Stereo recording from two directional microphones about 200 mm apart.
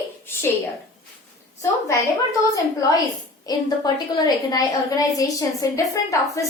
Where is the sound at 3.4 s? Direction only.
20° left (ahead or behind).